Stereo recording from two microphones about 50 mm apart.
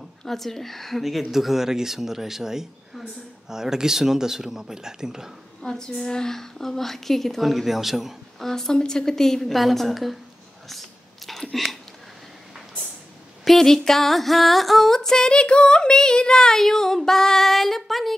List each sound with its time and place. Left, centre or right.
0.2 s speech: centre
5.6 s speech: centre
8.5 s female singing: centre
10.7 s a sound: centre
13.4 s female singing: centre